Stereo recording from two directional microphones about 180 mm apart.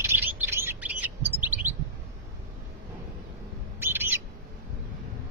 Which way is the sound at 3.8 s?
10° right (ahead or behind).